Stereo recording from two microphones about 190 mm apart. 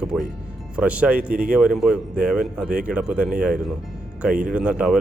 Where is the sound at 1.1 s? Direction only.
50° right (ahead or behind).